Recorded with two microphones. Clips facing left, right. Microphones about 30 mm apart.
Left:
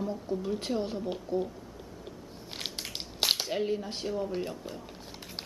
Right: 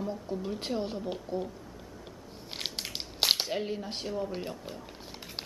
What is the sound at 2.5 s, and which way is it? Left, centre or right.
Crushing, centre.